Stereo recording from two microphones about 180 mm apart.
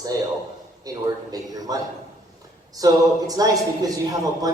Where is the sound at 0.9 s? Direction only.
20° right (ahead or behind).